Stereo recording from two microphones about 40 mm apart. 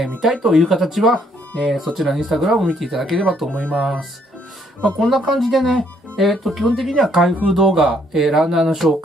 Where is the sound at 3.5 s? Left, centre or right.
Left.